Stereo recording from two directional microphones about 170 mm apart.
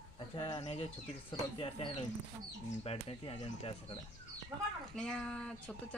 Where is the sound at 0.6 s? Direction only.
40° left (ahead or behind).